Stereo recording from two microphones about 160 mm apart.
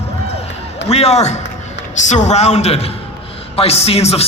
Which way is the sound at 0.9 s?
40° left (ahead or behind).